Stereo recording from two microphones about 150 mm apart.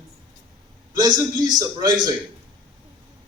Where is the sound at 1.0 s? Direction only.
25° right (ahead or behind).